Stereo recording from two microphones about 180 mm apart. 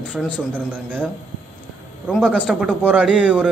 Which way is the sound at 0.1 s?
5° left (ahead or behind).